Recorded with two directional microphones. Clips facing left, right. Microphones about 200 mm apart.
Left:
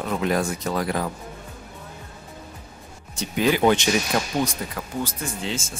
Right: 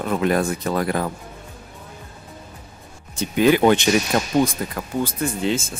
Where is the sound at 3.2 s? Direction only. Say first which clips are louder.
Right 4 dB; 55° right (ahead or behind).